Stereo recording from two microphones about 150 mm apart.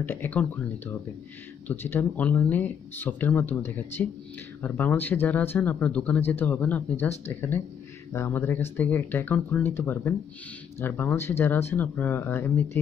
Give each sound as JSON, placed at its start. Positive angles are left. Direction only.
{"t": 0.0, "sound": "speech", "side_deg": 15}
{"t": 1.7, "sound": "speech", "side_deg": 15}